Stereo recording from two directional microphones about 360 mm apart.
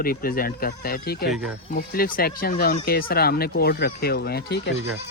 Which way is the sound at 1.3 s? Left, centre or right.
Centre.